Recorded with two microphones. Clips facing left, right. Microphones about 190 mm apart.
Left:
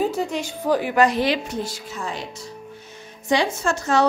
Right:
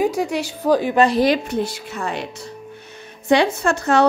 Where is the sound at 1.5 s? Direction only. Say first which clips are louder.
Right 5 dB; 60° right (ahead or behind).